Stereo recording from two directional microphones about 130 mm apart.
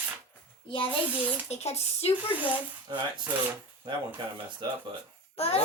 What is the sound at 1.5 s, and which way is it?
Speech, 55° left (ahead or behind).